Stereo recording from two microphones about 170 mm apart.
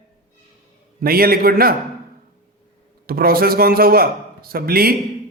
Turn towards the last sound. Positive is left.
turn(degrees=-60)  # may be behind; listen again after turning